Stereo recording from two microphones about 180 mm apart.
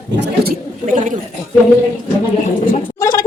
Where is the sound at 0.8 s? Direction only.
45° right (ahead or behind).